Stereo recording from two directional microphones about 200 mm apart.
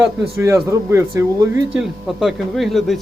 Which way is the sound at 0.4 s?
15° right (ahead or behind).